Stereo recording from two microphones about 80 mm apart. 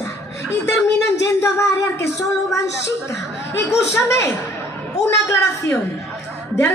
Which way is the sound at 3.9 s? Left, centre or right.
Left.